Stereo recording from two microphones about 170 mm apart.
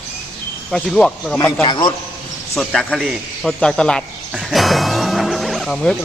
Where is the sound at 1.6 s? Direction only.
30° left (ahead or behind).